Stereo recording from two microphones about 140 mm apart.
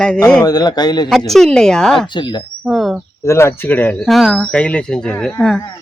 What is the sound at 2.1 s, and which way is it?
Speech, 35° left (ahead or behind).